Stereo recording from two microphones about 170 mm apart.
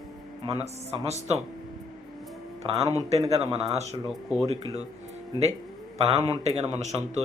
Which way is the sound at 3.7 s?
40° right (ahead or behind).